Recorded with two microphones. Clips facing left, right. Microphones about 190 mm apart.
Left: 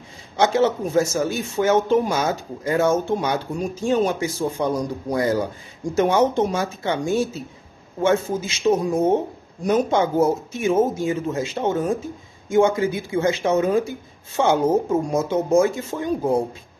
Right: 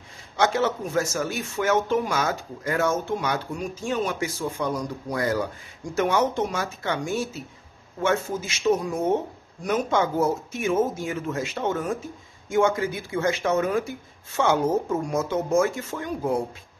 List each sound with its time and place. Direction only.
0.4 s speech: 25° left (ahead or behind)